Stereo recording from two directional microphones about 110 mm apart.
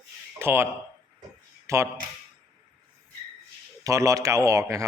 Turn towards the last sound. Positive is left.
turn(degrees=-30)  # may be behind; listen again after turning